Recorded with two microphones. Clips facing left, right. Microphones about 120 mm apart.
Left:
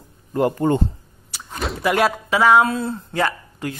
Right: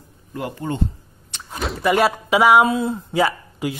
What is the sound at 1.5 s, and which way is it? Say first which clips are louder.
Speech: right 2 dB; centre (ahead or behind).